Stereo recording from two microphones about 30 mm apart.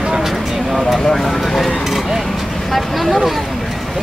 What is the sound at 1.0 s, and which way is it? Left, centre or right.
Speech, centre.